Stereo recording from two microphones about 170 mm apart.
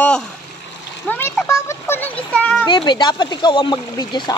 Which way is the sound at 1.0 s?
10° left (ahead or behind).